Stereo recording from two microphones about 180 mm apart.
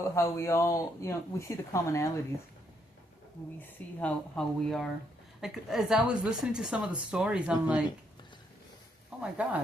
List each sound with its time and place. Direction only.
0.2 s speech: 15° left (ahead or behind)
4.0 s a woman's voice: 5° left (ahead or behind)
9.2 s speech: 5° right (ahead or behind)